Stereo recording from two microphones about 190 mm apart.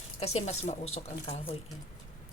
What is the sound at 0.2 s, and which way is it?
Speech, 35° left (ahead or behind).